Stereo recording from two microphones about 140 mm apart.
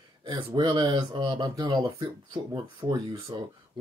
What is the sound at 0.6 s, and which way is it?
Speech, 35° right (ahead or behind).